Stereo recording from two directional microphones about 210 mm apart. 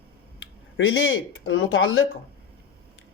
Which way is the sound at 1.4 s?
70° left (ahead or behind).